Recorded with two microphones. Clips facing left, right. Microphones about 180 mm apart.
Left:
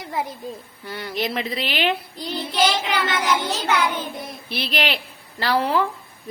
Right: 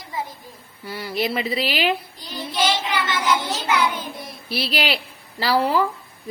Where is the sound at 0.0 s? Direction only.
70° left (ahead or behind).